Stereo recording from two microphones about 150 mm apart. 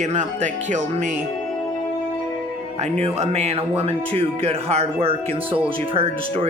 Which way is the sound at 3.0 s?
45° right (ahead or behind).